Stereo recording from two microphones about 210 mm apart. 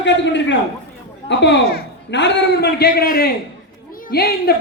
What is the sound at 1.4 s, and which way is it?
A man's voice, 50° left (ahead or behind).